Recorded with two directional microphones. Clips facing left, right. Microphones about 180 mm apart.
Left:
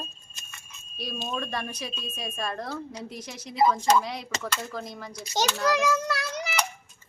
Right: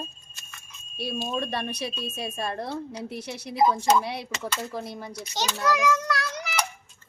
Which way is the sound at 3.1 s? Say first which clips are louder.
Right 4 dB; 65° right (ahead or behind).